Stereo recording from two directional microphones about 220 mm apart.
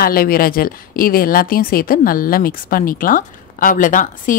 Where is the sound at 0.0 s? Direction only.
40° left (ahead or behind).